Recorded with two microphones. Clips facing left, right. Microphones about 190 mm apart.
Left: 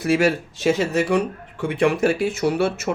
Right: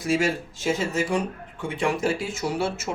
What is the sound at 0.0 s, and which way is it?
Speech, 65° left (ahead or behind).